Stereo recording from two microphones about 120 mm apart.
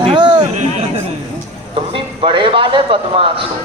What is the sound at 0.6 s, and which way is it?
Speech, 70° right (ahead or behind).